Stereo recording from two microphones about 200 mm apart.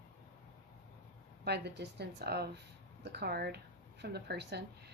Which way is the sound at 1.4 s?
55° right (ahead or behind).